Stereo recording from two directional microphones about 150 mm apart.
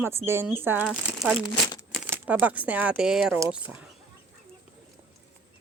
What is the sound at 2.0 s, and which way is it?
Speech, 10° right (ahead or behind).